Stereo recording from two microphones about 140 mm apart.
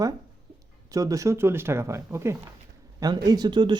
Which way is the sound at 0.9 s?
25° right (ahead or behind).